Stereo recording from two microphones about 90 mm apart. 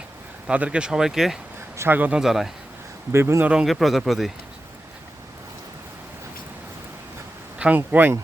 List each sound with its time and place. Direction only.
0.4 s speech: 15° right (ahead or behind)
1.7 s speech: 30° right (ahead or behind)
2.0 s speech: 15° right (ahead or behind)
2.2 s speech: centre (ahead or behind)
3.1 s speech: 30° right (ahead or behind)
3.4 s speech: 10° right (ahead or behind)
7.6 s speech: 15° right (ahead or behind)